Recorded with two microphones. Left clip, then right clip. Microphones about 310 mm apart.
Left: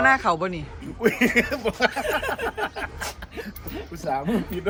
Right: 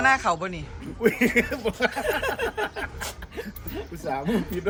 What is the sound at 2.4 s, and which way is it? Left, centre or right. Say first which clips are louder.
A man's voice: even; centre.